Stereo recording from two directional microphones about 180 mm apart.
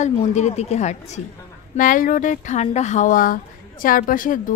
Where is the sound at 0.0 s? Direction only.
40° left (ahead or behind).